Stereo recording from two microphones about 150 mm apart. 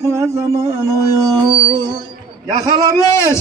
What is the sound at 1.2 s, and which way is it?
Speech, 30° right (ahead or behind).